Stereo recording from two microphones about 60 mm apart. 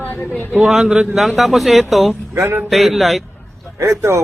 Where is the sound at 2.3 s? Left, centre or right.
Right.